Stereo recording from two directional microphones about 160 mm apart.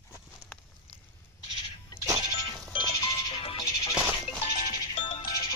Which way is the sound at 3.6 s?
20° left (ahead or behind).